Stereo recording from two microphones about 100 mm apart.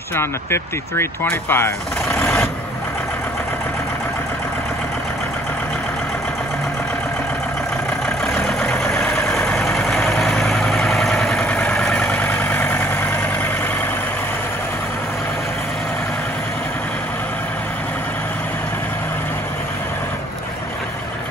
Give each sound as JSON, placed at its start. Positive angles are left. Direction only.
{"t": 0.1, "sound": "speech", "side_deg": 25}
{"t": 2.1, "sound": "vehicle", "side_deg": 25}
{"t": 8.4, "sound": "vehicle", "side_deg": 5}